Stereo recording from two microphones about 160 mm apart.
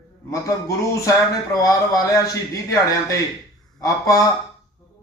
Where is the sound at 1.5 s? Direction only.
20° left (ahead or behind).